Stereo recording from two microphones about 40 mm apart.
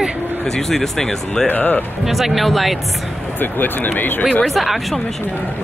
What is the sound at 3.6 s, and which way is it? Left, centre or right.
Speech, left.